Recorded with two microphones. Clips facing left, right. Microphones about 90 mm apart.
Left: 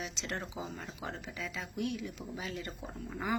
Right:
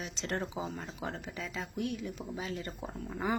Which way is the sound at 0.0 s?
35° right (ahead or behind).